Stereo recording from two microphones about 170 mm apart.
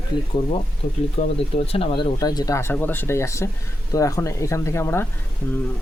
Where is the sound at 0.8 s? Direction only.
50° left (ahead or behind).